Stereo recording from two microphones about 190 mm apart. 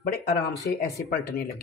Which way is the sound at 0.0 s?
55° left (ahead or behind).